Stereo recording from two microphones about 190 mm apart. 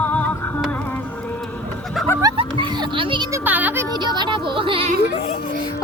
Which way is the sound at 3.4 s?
10° right (ahead or behind).